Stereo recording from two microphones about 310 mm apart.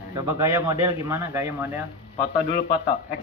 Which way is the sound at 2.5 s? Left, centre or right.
Left.